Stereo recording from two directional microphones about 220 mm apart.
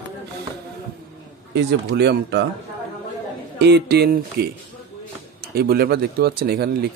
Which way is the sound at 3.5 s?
50° right (ahead or behind).